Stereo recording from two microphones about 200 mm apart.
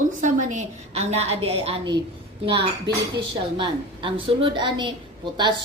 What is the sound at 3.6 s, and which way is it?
A woman's voice, 25° right (ahead or behind).